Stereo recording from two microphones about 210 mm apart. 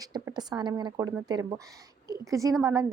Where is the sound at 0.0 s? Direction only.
20° right (ahead or behind).